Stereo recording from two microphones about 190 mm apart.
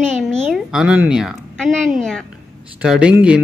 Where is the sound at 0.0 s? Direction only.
Centre (ahead or behind).